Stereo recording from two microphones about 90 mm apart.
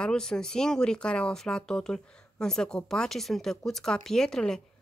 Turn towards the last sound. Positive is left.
turn(degrees=5)  # may be behind; listen again after turning